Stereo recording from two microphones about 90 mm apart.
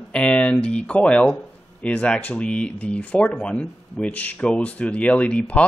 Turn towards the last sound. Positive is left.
turn(degrees=10)  # may be behind; listen again after turning